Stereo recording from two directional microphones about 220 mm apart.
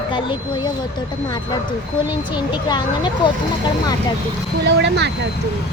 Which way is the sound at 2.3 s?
20° left (ahead or behind).